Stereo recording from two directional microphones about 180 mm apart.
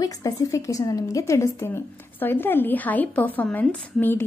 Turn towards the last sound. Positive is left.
turn(degrees=10)  # may be behind; listen again after turning